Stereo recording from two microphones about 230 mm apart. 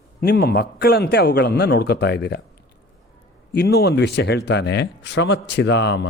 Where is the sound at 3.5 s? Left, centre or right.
Left.